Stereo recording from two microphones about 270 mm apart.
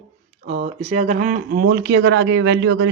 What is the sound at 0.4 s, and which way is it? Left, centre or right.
Speech, right.